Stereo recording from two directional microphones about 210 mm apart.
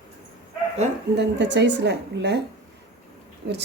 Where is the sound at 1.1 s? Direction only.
55° right (ahead or behind).